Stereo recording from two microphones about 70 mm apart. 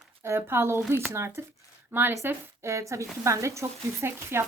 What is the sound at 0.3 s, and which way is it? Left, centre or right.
Speech, right.